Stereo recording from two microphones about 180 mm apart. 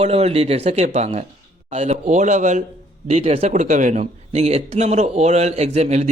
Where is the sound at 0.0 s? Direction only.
35° right (ahead or behind).